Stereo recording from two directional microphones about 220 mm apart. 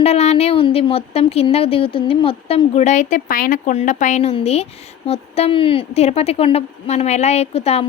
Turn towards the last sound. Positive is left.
turn(degrees=25)  # may be behind; listen again after turning